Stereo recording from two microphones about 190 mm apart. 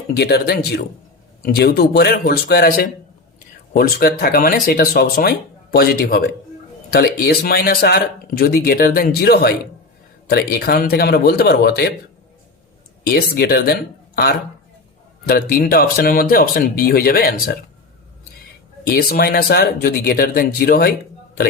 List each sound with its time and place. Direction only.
0.2 s speech: 60° left (ahead or behind)
13.1 s speech: 55° left (ahead or behind)
15.3 s speech: 50° left (ahead or behind)
18.9 s speech: 55° left (ahead or behind)